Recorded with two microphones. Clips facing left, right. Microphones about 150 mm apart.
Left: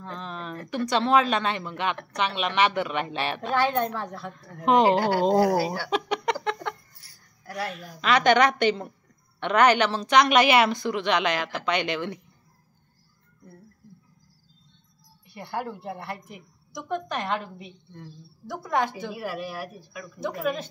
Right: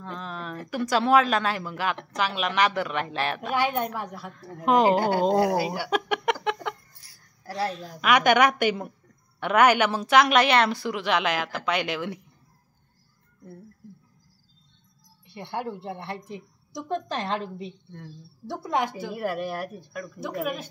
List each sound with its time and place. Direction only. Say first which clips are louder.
0.0 s a sound: even; centre (ahead or behind)
0.7 s a woman's voice: right 1 dB; 5° right (ahead or behind)
3.5 s a woman's voice: left 2 dB; 15° right (ahead or behind)
4.7 s a woman's voice: left 1 dB; centre (ahead or behind)
5.4 s a woman's voice: left 1 dB; 20° right (ahead or behind)
5.8 s a sound: right 1 dB; 5° right (ahead or behind)
7.4 s a woman's voice: right 3 dB; 30° right (ahead or behind)
8.0 s a woman's voice: even; 10° right (ahead or behind)
10.7 s a woman's voice: left 1 dB; 5° right (ahead or behind)
15.2 s a woman's voice: even; 20° right (ahead or behind)
19.1 s speech: right 4 dB; 50° right (ahead or behind)
20.2 s a woman's voice: left 2 dB; 10° right (ahead or behind)